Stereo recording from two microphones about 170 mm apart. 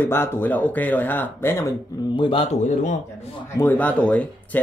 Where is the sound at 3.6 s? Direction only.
10° left (ahead or behind).